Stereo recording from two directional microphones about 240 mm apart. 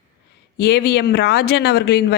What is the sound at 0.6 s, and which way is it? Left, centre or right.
A woman's voice, left.